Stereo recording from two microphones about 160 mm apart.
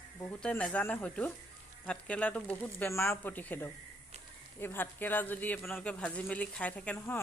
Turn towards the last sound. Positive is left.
turn(degrees=15)  # may be behind; listen again after turning